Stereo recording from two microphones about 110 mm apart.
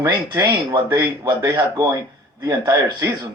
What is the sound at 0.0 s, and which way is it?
Speech, 35° right (ahead or behind).